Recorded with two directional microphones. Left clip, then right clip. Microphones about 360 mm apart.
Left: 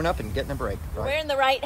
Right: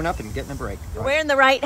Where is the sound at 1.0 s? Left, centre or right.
Right.